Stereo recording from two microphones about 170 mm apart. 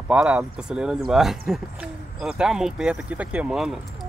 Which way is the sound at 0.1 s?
5° right (ahead or behind).